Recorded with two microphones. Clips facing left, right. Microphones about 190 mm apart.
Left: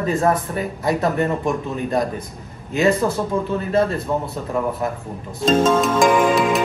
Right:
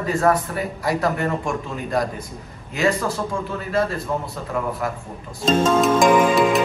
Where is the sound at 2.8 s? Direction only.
20° left (ahead or behind).